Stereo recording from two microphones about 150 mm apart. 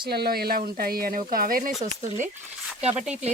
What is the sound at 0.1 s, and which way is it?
Speech, 90° right.